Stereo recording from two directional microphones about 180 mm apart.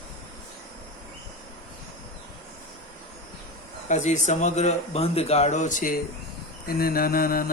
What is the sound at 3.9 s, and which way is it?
Speech, 40° left (ahead or behind).